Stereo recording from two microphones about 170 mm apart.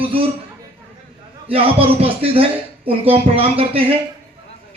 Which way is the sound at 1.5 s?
35° right (ahead or behind).